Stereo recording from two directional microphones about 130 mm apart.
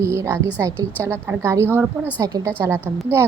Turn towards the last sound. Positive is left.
turn(degrees=-20)  # may be behind; listen again after turning